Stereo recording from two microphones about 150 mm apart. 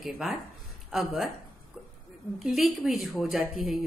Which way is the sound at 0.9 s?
5° right (ahead or behind).